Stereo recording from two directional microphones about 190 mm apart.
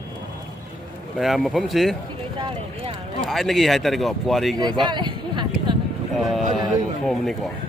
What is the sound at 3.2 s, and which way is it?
Speech, centre (ahead or behind).